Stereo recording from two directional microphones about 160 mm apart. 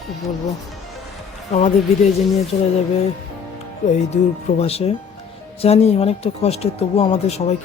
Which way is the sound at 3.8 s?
45° left (ahead or behind).